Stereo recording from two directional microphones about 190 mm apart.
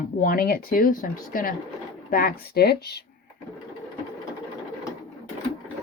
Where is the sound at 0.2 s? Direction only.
50° left (ahead or behind).